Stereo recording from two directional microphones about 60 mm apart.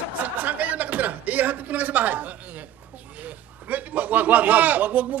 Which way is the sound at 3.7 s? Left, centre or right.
Right.